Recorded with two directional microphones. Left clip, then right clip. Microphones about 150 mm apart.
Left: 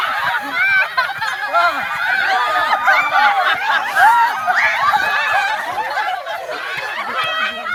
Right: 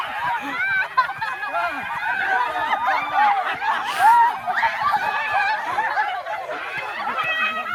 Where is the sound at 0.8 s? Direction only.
90° left.